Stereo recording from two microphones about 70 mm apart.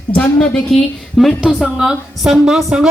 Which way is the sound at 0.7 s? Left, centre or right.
Centre.